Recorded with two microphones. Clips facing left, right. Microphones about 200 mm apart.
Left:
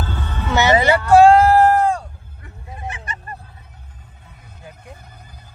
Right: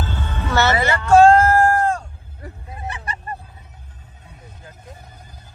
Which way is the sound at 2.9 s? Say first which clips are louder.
Right 2 dB; 35° right (ahead or behind).